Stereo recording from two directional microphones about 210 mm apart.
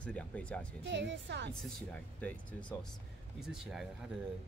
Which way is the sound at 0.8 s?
55° right (ahead or behind).